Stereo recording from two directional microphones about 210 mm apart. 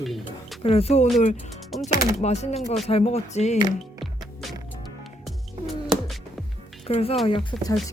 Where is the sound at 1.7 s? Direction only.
Centre (ahead or behind).